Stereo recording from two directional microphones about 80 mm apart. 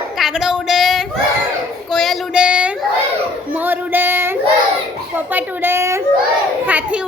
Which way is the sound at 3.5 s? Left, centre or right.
Right.